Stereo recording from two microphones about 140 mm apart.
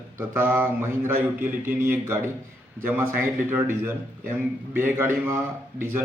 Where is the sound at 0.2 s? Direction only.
15° right (ahead or behind).